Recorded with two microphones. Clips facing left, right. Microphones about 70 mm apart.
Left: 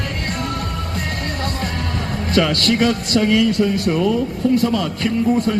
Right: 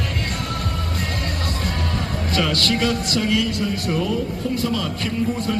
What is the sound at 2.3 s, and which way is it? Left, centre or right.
A man's voice, left.